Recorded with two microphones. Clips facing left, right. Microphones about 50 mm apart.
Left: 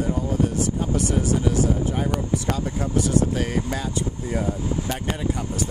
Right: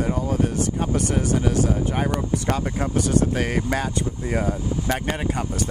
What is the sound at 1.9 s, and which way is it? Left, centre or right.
Speech, right.